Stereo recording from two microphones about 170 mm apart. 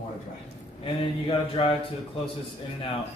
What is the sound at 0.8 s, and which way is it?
Mantra, 30° left (ahead or behind).